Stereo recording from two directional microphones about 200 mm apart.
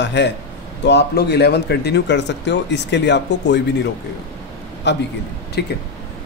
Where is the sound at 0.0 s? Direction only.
60° left (ahead or behind).